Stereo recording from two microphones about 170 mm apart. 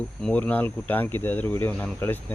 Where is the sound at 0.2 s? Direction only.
5° left (ahead or behind).